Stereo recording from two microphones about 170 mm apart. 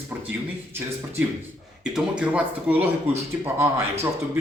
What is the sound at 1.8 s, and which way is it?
Speech, 5° right (ahead or behind).